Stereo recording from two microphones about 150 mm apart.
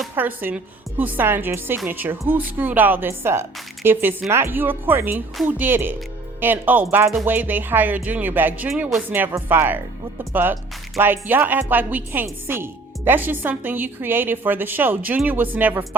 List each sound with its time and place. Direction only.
0.2 s a woman's voice: 10° right (ahead or behind)
10.9 s a woman's voice: 15° right (ahead or behind)